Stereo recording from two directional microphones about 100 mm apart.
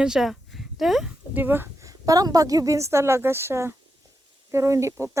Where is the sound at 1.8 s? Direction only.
35° right (ahead or behind).